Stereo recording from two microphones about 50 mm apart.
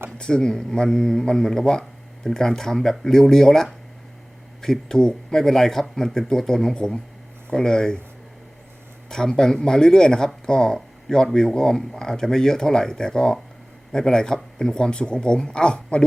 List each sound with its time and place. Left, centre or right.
0.2 s speech: centre
9.0 s speech: centre